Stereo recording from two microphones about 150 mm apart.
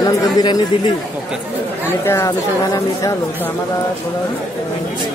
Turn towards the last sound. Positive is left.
turn(degrees=20)  # may be behind; listen again after turning